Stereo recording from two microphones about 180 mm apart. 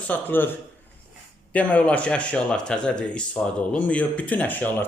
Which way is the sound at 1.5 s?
5° left (ahead or behind).